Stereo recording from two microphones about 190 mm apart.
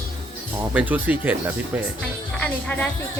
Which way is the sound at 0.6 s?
10° right (ahead or behind).